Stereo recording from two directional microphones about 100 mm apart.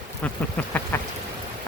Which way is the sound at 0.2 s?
15° left (ahead or behind).